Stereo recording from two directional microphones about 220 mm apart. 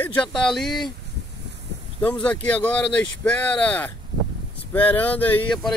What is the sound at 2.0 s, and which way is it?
Speech, 5° left (ahead or behind).